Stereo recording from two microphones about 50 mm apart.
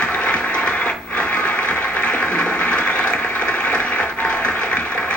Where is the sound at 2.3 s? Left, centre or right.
Left.